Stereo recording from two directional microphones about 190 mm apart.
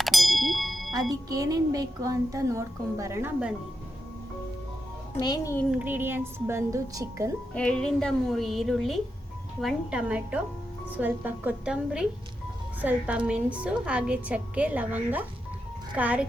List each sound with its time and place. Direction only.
0.0 s ding: centre (ahead or behind)
1.1 s a woman's voice: 20° right (ahead or behind)
5.2 s a child's voice: 20° left (ahead or behind)
5.7 s a woman's voice: 10° right (ahead or behind)
7.5 s a woman's voice: 5° left (ahead or behind)